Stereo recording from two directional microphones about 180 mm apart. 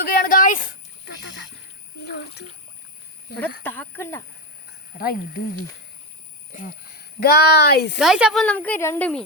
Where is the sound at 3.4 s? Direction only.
10° left (ahead or behind).